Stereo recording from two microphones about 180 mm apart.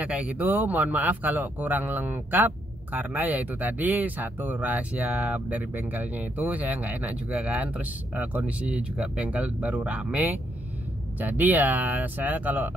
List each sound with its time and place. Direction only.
0.0 s speech: 5° right (ahead or behind)